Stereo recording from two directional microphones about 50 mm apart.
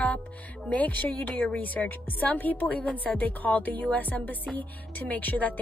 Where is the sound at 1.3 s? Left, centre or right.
Left.